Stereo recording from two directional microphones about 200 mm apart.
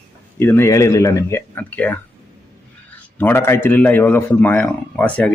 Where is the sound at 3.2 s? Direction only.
10° left (ahead or behind).